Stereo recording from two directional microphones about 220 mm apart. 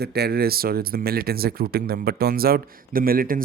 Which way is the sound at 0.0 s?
45° right (ahead or behind).